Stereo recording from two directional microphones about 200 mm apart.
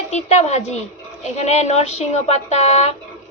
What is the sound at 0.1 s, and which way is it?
Speech, 35° left (ahead or behind).